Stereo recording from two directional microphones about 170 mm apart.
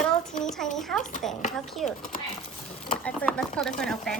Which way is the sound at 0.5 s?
Centre (ahead or behind).